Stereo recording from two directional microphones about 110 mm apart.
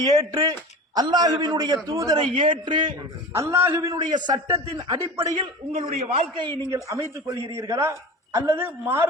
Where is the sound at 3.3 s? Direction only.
25° right (ahead or behind).